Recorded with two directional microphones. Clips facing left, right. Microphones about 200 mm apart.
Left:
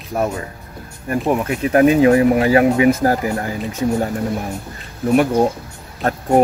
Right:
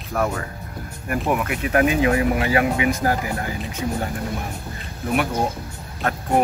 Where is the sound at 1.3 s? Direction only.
35° left (ahead or behind).